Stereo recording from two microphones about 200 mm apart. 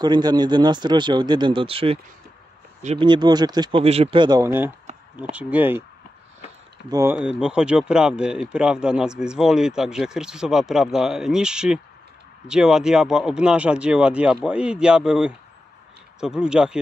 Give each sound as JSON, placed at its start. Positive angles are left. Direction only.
{"t": 0.0, "sound": "speech", "side_deg": -20}
{"t": 3.1, "sound": "speech", "side_deg": -20}
{"t": 6.9, "sound": "speech", "side_deg": -15}